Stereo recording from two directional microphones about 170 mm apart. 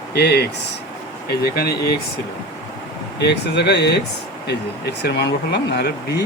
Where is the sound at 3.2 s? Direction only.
80° left.